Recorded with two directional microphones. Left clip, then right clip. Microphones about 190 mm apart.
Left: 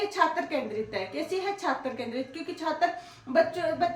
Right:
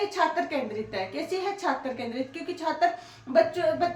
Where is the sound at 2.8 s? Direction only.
15° left (ahead or behind).